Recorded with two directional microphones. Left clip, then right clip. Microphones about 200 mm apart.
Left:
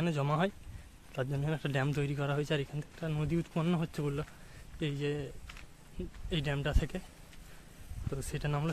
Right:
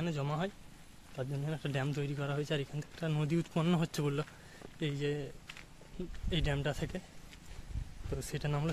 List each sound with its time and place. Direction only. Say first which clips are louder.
0.0 s speech: left 5 dB; 25° left (ahead or behind)
3.0 s speech: even; centre (ahead or behind)
4.7 s speech: left 1 dB; 15° left (ahead or behind)
6.3 s speech: even; 10° left (ahead or behind)
8.1 s speech: left 1 dB; 10° left (ahead or behind)